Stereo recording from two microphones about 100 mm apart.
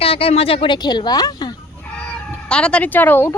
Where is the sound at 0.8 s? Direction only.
45° left (ahead or behind).